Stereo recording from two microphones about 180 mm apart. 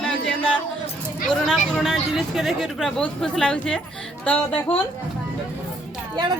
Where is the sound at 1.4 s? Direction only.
Centre (ahead or behind).